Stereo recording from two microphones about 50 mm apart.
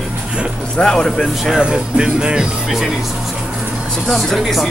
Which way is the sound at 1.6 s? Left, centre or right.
Centre.